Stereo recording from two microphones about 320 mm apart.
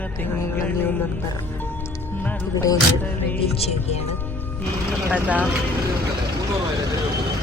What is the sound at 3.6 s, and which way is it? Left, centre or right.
Speech, centre.